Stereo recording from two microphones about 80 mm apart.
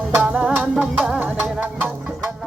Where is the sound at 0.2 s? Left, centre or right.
Centre.